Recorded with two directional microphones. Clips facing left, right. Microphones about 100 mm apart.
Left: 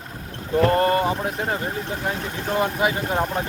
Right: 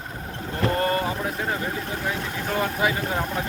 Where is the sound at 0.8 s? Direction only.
30° left (ahead or behind).